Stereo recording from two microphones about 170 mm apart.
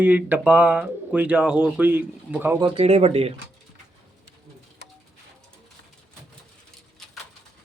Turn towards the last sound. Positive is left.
turn(degrees=0)  # may be behind; listen again after turning